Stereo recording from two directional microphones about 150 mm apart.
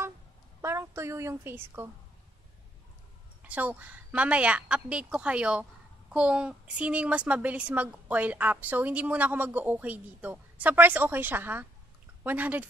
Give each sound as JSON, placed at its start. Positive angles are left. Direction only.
{"t": 0.6, "sound": "a woman's voice", "side_deg": -20}
{"t": 3.4, "sound": "a woman's voice", "side_deg": -10}